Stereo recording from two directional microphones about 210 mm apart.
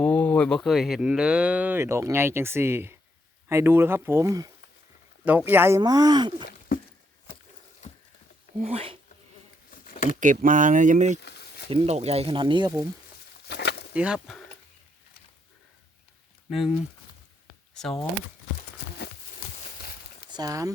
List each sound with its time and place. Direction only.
0.0 s speech: 5° left (ahead or behind); by 6.3 s 20° right (ahead or behind)
8.5 s speech: 30° right (ahead or behind)
9.7 s a sound: 40° left (ahead or behind)
10.2 s speech: 40° right (ahead or behind)
11.2 s a sound: 50° left (ahead or behind)
11.7 s speech: 30° right (ahead or behind)
13.5 s a sound: 50° left (ahead or behind)
13.9 s speech: 5° right (ahead or behind)
16.5 s speech: centre (ahead or behind)
20.3 s speech: 15° right (ahead or behind)